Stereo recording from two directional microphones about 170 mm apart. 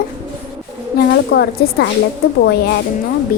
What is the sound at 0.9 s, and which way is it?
Speech, 75° left (ahead or behind).